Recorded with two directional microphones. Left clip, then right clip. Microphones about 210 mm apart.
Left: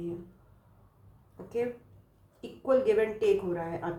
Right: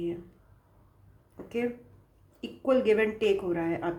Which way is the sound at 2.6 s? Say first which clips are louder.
Right 1 dB; 45° right (ahead or behind).